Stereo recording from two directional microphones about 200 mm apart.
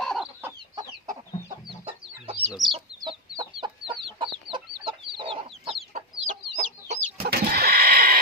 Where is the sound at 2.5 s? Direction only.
Centre (ahead or behind).